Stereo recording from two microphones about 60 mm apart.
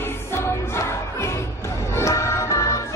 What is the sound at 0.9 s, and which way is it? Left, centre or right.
Crowd, left.